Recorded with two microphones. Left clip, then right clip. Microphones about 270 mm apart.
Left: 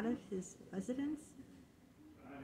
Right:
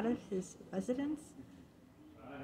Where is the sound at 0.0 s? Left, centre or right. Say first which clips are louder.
Right 4 dB; centre.